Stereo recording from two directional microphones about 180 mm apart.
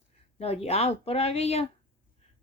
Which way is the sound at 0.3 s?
35° left (ahead or behind).